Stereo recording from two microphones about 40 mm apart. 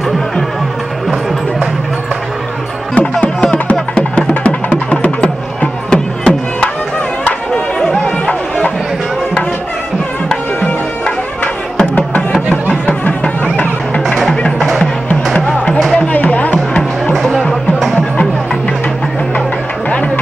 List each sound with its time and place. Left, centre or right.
2.9 s music: left
8.3 s run: left
13.2 s music: left
15.3 s music: left